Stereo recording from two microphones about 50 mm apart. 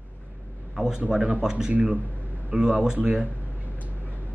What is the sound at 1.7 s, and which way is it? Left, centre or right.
Speech, right.